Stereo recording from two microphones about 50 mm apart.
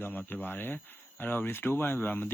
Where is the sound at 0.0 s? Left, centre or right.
Left.